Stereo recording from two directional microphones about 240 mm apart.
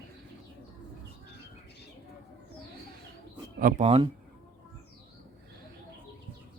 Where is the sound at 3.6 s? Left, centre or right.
Right.